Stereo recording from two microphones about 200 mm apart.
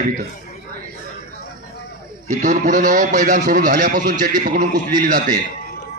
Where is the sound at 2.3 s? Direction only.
40° right (ahead or behind).